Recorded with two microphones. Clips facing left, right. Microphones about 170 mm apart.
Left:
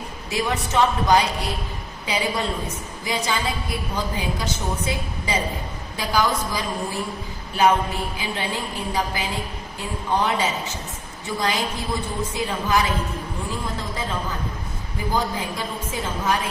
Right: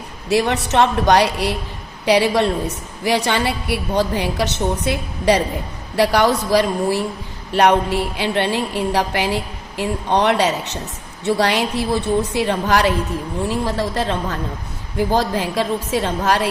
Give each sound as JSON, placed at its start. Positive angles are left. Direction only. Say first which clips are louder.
{"t": 0.3, "sound": "a woman's voice", "louder": "right 7 dB", "side_deg": -75}